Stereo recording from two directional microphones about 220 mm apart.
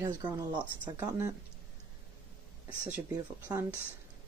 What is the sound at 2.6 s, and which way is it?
Speech, 5° right (ahead or behind).